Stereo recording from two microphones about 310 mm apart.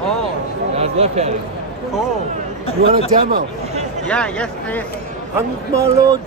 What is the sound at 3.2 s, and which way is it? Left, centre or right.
Speech, right.